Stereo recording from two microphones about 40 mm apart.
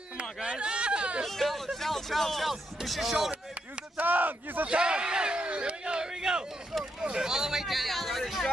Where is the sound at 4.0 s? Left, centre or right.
Right.